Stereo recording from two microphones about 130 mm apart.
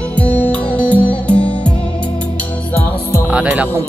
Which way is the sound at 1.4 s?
40° left (ahead or behind).